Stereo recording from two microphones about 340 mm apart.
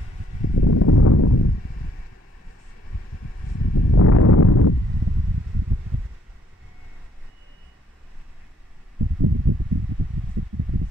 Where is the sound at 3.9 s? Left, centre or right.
Left.